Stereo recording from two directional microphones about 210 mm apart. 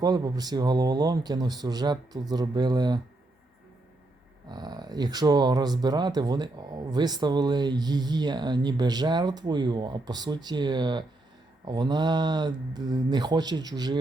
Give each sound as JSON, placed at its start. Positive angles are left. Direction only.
{"t": 0.0, "sound": "speech", "side_deg": -20}
{"t": 4.4, "sound": "speech", "side_deg": -20}